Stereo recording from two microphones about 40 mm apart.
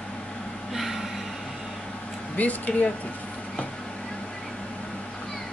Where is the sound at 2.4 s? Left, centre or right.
Left.